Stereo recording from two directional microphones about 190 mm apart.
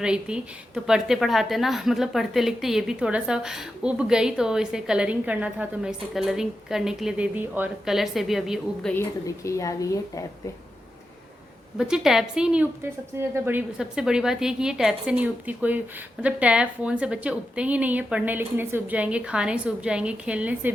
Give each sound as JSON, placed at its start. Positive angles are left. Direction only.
{"t": 0.0, "sound": "a woman's voice", "side_deg": -5}
{"t": 9.2, "sound": "speech", "side_deg": 15}
{"t": 11.8, "sound": "a woman's voice", "side_deg": 0}